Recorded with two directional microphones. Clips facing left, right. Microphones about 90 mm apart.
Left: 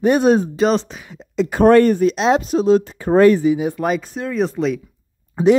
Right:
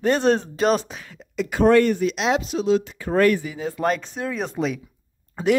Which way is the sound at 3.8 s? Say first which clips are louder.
Left 2 dB; 5° left (ahead or behind).